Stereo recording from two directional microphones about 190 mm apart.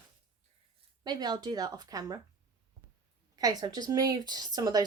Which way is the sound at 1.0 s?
20° right (ahead or behind).